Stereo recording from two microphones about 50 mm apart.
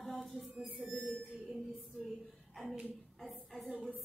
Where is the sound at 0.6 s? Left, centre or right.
Right.